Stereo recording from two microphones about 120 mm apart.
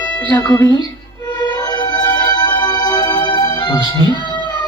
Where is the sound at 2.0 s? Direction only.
35° left (ahead or behind).